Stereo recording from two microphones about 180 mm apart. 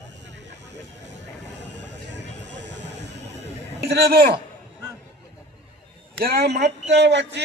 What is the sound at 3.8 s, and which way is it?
Speech, 65° right (ahead or behind).